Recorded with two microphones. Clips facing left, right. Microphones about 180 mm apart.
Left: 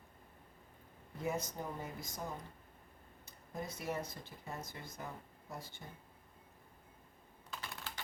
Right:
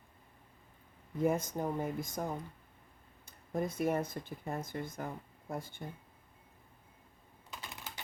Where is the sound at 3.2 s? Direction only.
50° right (ahead or behind).